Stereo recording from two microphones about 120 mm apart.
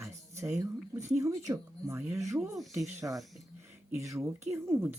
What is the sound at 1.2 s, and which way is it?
Speech, 30° right (ahead or behind).